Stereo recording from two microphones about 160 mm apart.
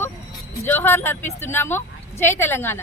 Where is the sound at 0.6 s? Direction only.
15° left (ahead or behind).